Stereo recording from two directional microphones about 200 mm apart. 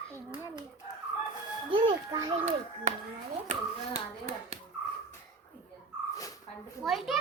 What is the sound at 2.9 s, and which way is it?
A child's voice, 35° right (ahead or behind).